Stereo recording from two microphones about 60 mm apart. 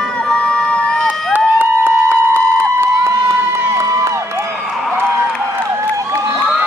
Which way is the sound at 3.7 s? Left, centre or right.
Right.